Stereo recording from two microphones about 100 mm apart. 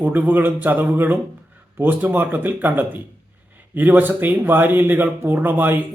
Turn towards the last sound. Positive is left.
turn(degrees=-20)  # may be behind; listen again after turning